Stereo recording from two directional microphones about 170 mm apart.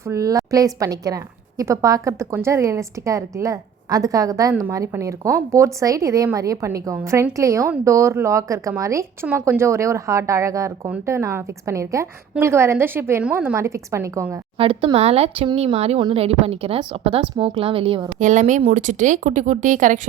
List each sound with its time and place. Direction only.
0.0 s a woman's voice: 20° right (ahead or behind)
14.6 s speech: 35° right (ahead or behind)
18.2 s speech: 45° right (ahead or behind)